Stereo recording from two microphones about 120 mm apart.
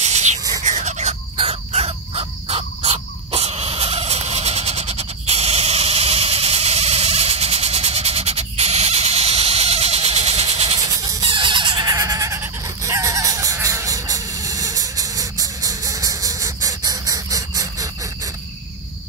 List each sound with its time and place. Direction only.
0.0 s a sound: 70° right (ahead or behind)
1.3 s bird: 55° right (ahead or behind)
10.8 s train: 30° right (ahead or behind)
11.2 s fowl: 45° right (ahead or behind); by 18.3 s 25° right (ahead or behind)